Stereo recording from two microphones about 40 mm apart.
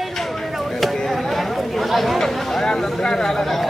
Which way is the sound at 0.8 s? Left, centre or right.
Centre.